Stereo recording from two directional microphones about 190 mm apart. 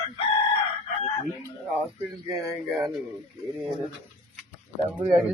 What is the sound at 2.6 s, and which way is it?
Speech, centre (ahead or behind).